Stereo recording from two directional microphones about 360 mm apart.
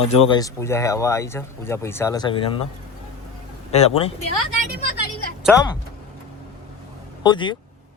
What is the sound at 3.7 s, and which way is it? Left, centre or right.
Speech, centre.